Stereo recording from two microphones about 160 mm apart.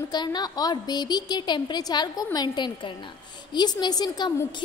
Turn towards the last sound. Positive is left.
turn(degrees=25)  # may be behind; listen again after turning